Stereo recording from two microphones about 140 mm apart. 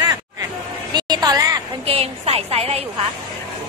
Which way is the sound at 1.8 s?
45° right (ahead or behind).